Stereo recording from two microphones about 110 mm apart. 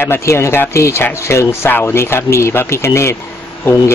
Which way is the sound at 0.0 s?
25° left (ahead or behind).